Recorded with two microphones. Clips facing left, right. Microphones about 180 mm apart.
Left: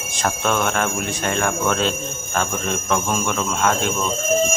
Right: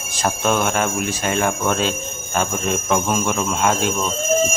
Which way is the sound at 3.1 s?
15° right (ahead or behind).